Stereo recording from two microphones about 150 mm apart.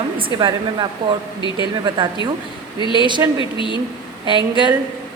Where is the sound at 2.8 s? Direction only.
30° left (ahead or behind).